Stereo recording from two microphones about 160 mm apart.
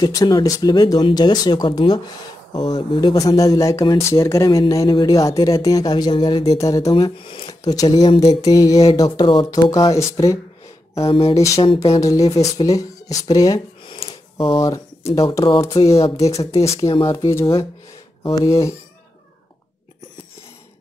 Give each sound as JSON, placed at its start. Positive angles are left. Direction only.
{"t": 0.0, "sound": "speech", "side_deg": 25}
{"t": 6.9, "sound": "speech", "side_deg": 35}
{"t": 11.0, "sound": "speech", "side_deg": 35}
{"t": 12.0, "sound": "speech", "side_deg": 20}
{"t": 16.6, "sound": "speech", "side_deg": 20}